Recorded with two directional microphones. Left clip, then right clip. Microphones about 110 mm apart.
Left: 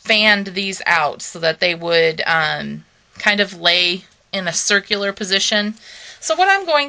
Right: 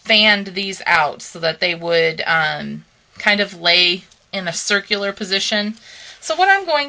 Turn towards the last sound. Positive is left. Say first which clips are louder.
# even
turn(degrees=30)  # may be behind; listen again after turning